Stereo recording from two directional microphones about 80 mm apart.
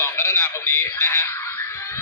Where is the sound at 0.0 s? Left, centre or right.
Left.